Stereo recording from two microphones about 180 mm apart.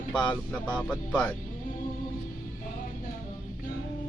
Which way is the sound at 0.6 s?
5° left (ahead or behind).